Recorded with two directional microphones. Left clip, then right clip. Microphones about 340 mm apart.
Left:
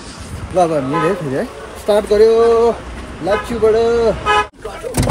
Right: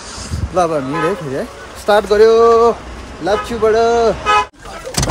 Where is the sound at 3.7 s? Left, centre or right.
Right.